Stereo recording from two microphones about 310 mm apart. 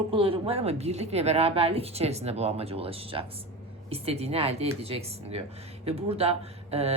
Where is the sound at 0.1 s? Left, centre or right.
Centre.